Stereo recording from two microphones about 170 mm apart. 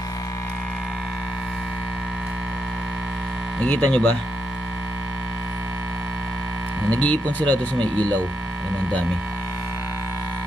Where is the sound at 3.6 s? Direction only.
5° left (ahead or behind).